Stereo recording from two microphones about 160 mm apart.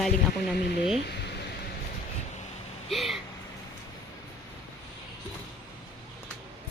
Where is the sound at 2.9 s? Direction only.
Centre (ahead or behind).